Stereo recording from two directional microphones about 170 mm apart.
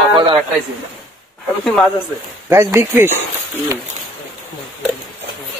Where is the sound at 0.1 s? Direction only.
30° right (ahead or behind).